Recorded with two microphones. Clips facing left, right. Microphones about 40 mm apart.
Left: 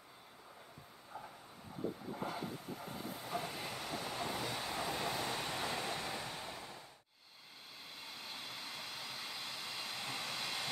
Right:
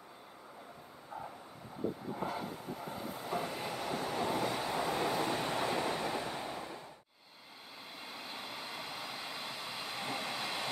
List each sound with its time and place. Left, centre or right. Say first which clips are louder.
2.1 s vehicle: right 3 dB; centre
5.7 s waves: right 6 dB; right
8.0 s vehicle: right 4 dB; centre